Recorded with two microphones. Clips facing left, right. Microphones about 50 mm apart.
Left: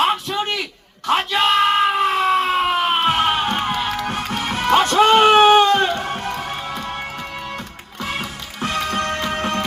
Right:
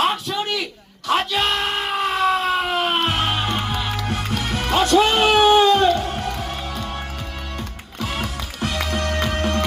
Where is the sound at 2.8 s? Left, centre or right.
Centre.